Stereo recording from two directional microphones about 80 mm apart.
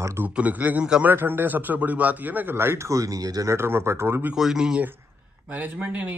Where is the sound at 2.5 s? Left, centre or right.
Right.